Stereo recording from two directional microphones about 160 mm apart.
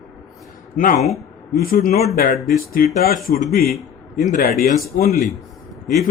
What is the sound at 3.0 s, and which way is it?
Speech, 65° left (ahead or behind).